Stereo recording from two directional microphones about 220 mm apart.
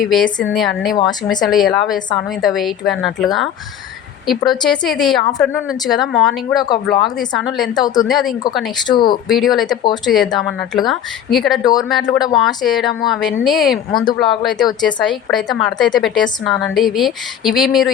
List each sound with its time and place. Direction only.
0.0 s a woman's voice: centre (ahead or behind)
4.3 s a woman's voice: centre (ahead or behind)
7.8 s speech: 15° left (ahead or behind)
8.0 s a woman's voice: centre (ahead or behind)
8.9 s speech: 20° left (ahead or behind)
9.3 s a woman's voice: centre (ahead or behind)
9.6 s speech: 20° left (ahead or behind)
10.1 s a woman's voice: centre (ahead or behind)
11.6 s speech: 15° left (ahead or behind)
11.9 s a woman's voice: centre (ahead or behind)